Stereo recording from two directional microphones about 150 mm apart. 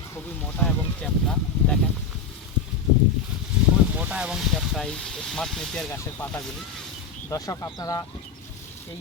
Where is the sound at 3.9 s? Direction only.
10° right (ahead or behind).